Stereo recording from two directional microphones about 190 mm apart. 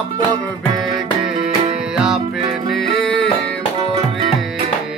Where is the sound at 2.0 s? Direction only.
Centre (ahead or behind).